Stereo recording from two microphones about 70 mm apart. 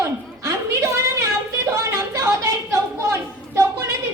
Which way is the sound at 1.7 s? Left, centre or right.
Right.